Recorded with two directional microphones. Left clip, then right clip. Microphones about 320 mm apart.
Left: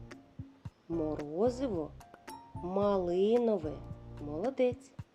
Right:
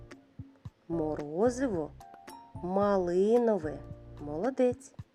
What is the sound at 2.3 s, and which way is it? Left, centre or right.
Music, centre.